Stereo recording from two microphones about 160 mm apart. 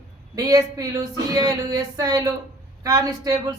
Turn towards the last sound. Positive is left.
turn(degrees=-20)  # may be behind; listen again after turning